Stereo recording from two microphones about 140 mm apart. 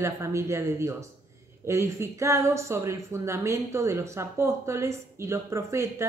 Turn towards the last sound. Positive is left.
turn(degrees=-20)  # may be behind; listen again after turning